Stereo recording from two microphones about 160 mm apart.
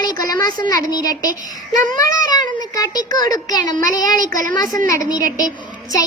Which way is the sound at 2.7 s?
25° left (ahead or behind).